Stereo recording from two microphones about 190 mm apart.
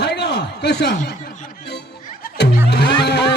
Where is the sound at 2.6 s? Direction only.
60° left (ahead or behind).